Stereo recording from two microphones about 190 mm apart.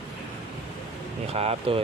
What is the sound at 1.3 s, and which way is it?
Speech, 30° right (ahead or behind).